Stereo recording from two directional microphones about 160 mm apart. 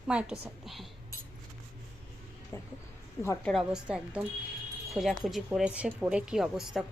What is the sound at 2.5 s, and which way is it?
Speech, 15° left (ahead or behind).